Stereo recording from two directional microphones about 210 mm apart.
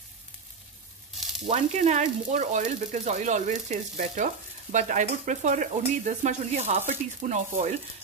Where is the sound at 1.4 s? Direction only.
35° right (ahead or behind).